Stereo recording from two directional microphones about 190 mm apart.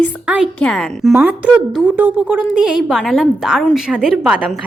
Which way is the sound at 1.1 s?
10° right (ahead or behind).